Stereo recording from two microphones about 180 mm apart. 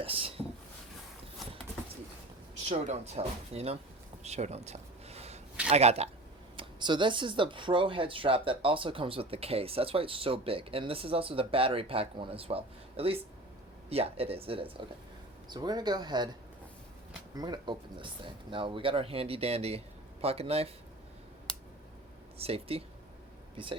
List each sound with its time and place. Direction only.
0.0 s speech: 30° right (ahead or behind)
2.6 s speech: 35° right (ahead or behind)
4.2 s a sound: 40° right (ahead or behind)
5.6 s speech: 35° right (ahead or behind)
6.6 s speech: 25° right (ahead or behind)
17.3 s speech: 20° right (ahead or behind)
22.4 s speech: 35° right (ahead or behind)